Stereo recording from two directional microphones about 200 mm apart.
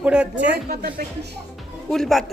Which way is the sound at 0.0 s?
5° right (ahead or behind).